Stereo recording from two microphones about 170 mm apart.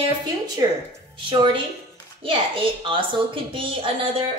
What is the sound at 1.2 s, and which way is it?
A woman's voice, 30° right (ahead or behind).